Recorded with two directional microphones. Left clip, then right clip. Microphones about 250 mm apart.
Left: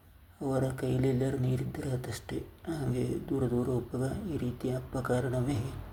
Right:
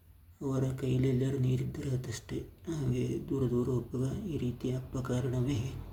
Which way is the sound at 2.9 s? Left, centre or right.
Left.